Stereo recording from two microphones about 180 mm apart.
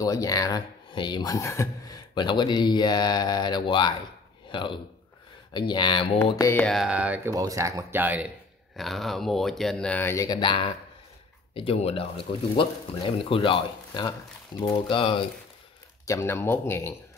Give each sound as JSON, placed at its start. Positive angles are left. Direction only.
{"t": 0.0, "sound": "a man's voice", "side_deg": 20}
{"t": 6.6, "sound": "speech", "side_deg": 0}
{"t": 7.2, "sound": "speech", "side_deg": -20}
{"t": 16.1, "sound": "speech", "side_deg": 15}